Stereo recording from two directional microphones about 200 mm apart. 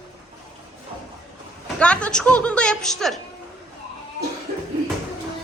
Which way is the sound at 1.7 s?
5° left (ahead or behind).